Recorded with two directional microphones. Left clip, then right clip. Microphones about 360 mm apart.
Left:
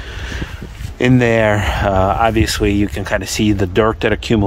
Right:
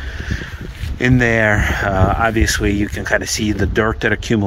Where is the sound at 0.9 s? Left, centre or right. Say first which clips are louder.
Left 2 dB; centre.